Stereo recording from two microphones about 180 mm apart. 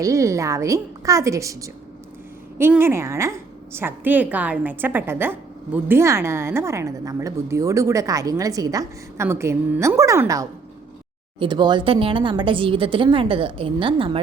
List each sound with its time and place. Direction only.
0.0 s a woman's voice: 15° right (ahead or behind)